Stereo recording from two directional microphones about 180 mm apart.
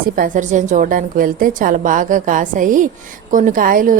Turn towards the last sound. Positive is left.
turn(degrees=-50)  # may be behind; listen again after turning